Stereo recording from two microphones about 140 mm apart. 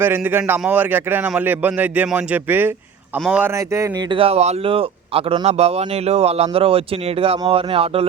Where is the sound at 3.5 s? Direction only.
20° right (ahead or behind).